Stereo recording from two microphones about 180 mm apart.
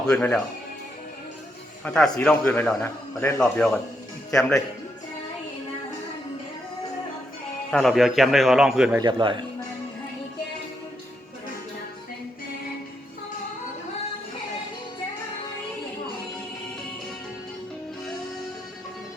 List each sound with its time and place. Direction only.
0.1 s a man's voice: 5° left (ahead or behind)
1.8 s a man's voice: 5° left (ahead or behind)
7.7 s a man's voice: centre (ahead or behind)
9.0 s speech: 25° right (ahead or behind)